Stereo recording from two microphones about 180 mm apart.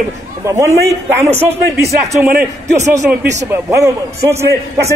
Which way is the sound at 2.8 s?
15° right (ahead or behind).